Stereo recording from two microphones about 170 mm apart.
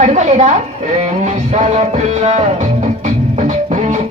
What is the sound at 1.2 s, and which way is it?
Music, 45° right (ahead or behind).